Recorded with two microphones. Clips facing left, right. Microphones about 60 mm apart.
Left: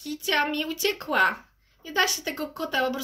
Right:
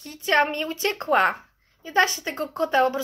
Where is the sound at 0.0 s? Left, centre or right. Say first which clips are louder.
Right 4 dB; right.